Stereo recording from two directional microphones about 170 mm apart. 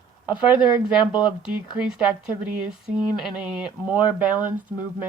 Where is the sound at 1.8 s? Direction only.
5° right (ahead or behind).